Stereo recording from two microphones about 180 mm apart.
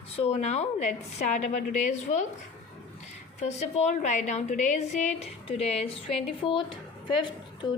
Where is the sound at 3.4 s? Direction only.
40° left (ahead or behind).